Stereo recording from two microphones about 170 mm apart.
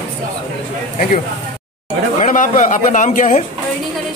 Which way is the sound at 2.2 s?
50° left (ahead or behind).